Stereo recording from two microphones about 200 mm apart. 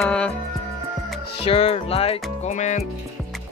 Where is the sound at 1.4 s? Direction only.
30° left (ahead or behind).